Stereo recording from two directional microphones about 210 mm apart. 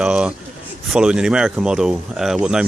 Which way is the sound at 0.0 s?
5° right (ahead or behind).